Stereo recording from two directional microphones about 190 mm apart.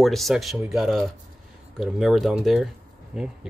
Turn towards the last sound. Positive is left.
turn(degrees=-5)  # may be behind; listen again after turning